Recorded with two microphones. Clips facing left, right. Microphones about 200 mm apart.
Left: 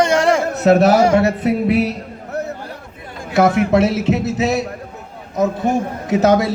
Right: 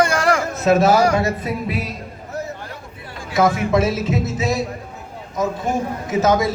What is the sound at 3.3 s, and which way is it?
A man's voice, 65° left (ahead or behind).